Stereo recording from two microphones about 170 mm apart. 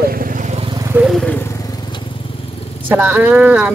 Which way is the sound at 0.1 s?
55° right (ahead or behind).